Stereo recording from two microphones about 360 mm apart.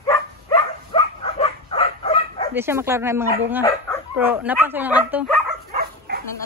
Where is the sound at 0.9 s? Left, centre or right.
Centre.